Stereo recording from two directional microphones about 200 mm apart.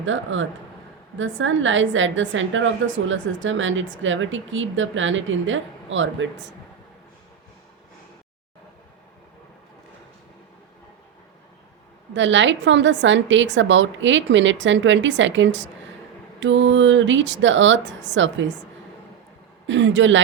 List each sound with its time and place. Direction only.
0.0 s a woman's voice: 75° right (ahead or behind)
12.1 s a woman's voice: 65° right (ahead or behind)
19.6 s speech: 65° right (ahead or behind)